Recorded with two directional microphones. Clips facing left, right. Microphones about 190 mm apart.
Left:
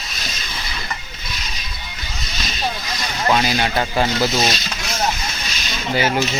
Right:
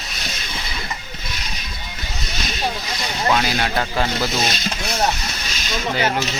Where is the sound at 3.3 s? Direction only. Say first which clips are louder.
Left 3 dB; 5° left (ahead or behind).